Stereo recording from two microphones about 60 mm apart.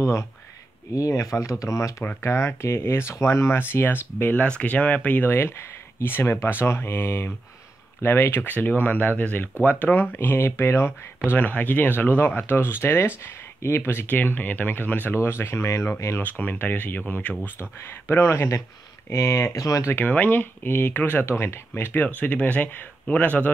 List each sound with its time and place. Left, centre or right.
0.0 s speech: left
0.9 s speech: left
4.5 s speech: left
11.2 s speech: left
15.1 s speech: left
16.2 s speech: left
17.6 s speech: left
19.6 s speech: left
19.9 s speech: left
21.3 s speech: left
22.0 s speech: left